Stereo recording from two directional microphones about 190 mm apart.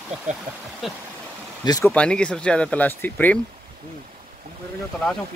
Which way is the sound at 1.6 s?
20° left (ahead or behind).